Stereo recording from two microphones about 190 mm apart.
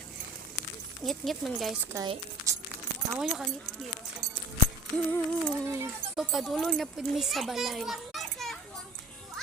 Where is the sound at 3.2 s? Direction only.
Centre (ahead or behind).